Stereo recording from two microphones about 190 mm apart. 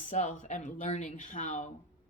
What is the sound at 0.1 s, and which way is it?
Speech, 40° left (ahead or behind).